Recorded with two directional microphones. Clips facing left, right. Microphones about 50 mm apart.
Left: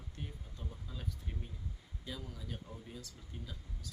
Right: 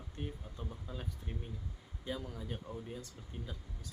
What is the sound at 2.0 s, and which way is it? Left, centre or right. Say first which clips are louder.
Speech: right 5 dB; right.